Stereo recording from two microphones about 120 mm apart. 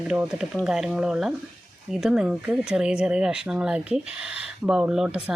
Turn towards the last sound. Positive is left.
turn(degrees=-5)  # may be behind; listen again after turning